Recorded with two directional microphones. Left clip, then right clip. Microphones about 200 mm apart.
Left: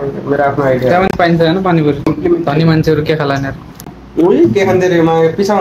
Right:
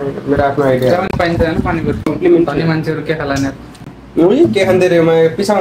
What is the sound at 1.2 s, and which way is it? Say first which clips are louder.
Speech: left 3 dB; 25° left (ahead or behind).